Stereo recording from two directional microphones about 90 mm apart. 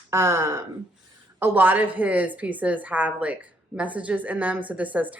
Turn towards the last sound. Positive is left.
turn(degrees=-15)  # may be behind; listen again after turning